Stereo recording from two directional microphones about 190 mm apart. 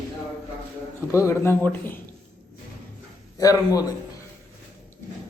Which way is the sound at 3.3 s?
20° left (ahead or behind).